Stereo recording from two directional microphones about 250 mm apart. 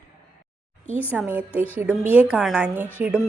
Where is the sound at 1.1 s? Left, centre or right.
Centre.